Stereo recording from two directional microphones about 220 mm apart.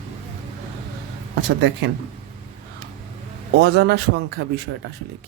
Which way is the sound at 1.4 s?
50° right (ahead or behind).